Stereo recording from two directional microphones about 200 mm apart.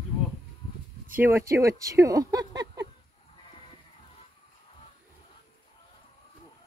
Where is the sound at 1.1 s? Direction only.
10° right (ahead or behind).